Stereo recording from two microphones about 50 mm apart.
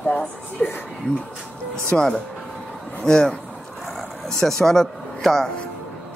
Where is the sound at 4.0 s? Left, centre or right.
Centre.